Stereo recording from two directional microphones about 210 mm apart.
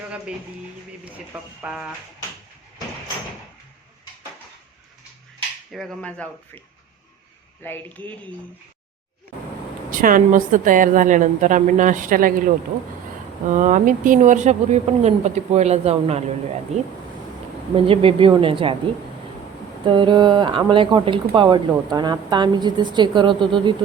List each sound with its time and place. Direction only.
1.0 s speech: 5° right (ahead or behind)
5.7 s speech: centre (ahead or behind)
7.6 s speech: 10° left (ahead or behind)
9.9 s speech: 40° right (ahead or behind)
13.5 s speech: 35° right (ahead or behind)
19.8 s speech: 25° right (ahead or behind)